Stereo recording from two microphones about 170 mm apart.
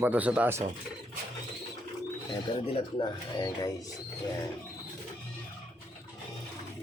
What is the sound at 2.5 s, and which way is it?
Speech, 30° left (ahead or behind).